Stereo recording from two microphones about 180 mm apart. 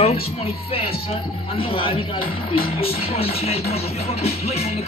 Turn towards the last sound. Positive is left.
turn(degrees=35)  # may be behind; listen again after turning